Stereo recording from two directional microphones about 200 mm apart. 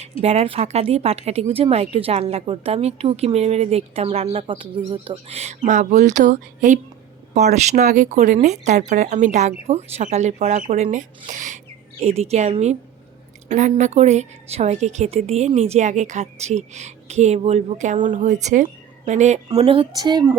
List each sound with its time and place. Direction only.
0.2 s a woman's voice: 30° right (ahead or behind)